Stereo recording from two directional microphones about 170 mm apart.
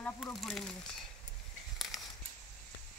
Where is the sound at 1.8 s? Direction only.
Centre (ahead or behind).